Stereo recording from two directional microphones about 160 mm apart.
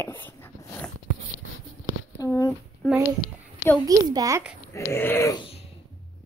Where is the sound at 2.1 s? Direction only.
20° left (ahead or behind).